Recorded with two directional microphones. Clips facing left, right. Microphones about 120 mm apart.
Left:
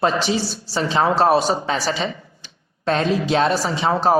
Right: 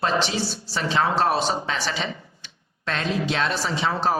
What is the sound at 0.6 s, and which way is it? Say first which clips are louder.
Speech: left 4 dB; 35° left (ahead or behind).